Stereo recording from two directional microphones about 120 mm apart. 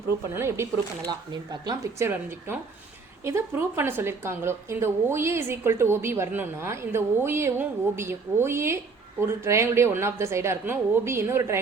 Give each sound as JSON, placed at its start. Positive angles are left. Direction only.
{"t": 0.3, "sound": "a woman's voice", "side_deg": -20}
{"t": 1.3, "sound": "speech", "side_deg": -35}
{"t": 2.0, "sound": "a woman's voice", "side_deg": -20}